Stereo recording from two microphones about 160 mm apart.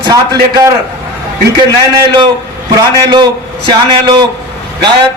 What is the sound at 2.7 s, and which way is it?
Speech, 25° right (ahead or behind).